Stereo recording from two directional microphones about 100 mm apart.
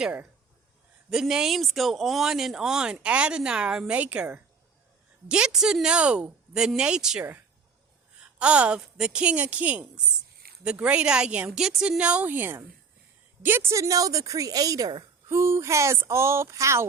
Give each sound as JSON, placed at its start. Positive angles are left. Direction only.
{"t": 0.0, "sound": "a woman's voice", "side_deg": -15}
{"t": 1.1, "sound": "a woman's voice", "side_deg": -5}
{"t": 15.3, "sound": "speech", "side_deg": -30}